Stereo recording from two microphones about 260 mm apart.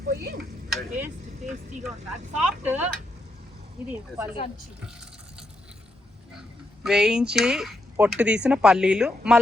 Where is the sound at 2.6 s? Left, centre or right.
Centre.